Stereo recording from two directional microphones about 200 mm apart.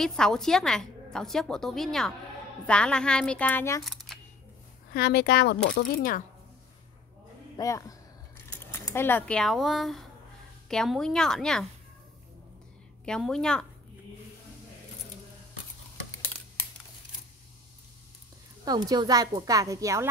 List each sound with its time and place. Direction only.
0.0 s a woman's voice: 5° left (ahead or behind)
3.8 s camera: centre (ahead or behind)
4.9 s speech: 55° left (ahead or behind)
7.5 s a woman's voice: 15° left (ahead or behind)
13.0 s a woman's voice: 5° left (ahead or behind)
18.7 s a woman's voice: 20° right (ahead or behind)